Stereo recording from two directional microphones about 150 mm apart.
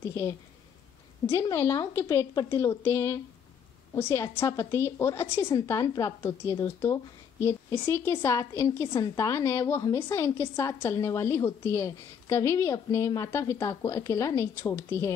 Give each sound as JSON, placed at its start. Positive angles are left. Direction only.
{"t": 0.1, "sound": "a woman's voice", "side_deg": 20}